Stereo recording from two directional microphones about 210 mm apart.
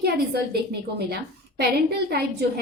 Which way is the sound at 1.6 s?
50° right (ahead or behind).